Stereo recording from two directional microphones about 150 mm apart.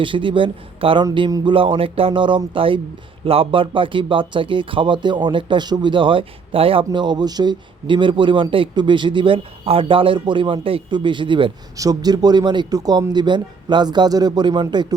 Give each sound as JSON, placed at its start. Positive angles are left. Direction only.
{"t": 0.0, "sound": "speech", "side_deg": -35}